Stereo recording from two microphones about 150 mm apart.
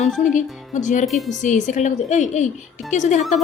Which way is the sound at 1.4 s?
55° left (ahead or behind).